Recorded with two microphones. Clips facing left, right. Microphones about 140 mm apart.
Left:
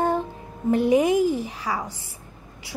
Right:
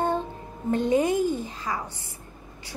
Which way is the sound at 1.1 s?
90° left.